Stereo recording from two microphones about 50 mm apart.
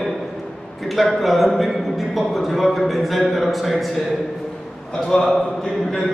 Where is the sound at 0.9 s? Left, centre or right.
Centre.